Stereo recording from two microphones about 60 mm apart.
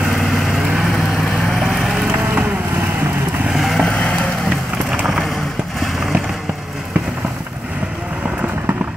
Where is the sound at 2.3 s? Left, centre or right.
Right.